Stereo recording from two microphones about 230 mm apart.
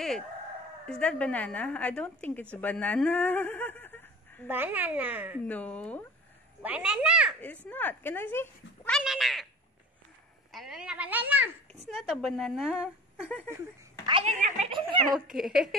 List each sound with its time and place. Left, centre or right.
0.8 s a woman's voice: centre
4.5 s a woman's voice: centre
5.5 s speech: centre
6.6 s a woman's voice: centre
7.6 s speech: centre
10.5 s a woman's voice: centre
14.0 s a woman's voice: right
15.1 s a woman's voice: centre